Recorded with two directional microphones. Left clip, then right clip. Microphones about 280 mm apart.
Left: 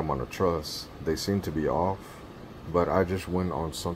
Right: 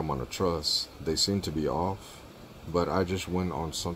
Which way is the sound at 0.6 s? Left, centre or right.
Centre.